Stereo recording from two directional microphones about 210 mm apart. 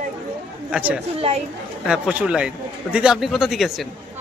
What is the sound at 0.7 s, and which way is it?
Speech, 5° right (ahead or behind).